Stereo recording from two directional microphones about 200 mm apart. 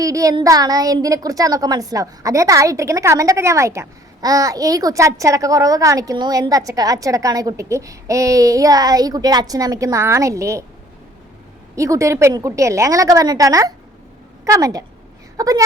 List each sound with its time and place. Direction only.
0.0 s a woman's voice: 15° right (ahead or behind)
11.8 s a woman's voice: 15° right (ahead or behind)